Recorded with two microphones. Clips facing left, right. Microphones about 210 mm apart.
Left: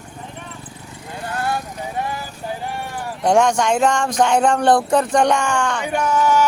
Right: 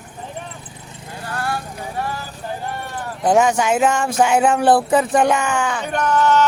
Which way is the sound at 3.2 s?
5° right (ahead or behind).